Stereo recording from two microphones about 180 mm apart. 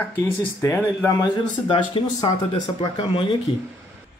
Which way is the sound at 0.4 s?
10° left (ahead or behind).